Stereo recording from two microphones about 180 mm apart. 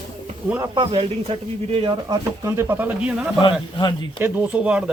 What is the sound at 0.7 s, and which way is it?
Speech, 25° right (ahead or behind).